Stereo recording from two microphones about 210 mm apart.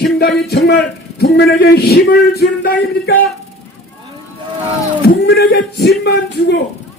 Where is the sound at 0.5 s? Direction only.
50° left (ahead or behind).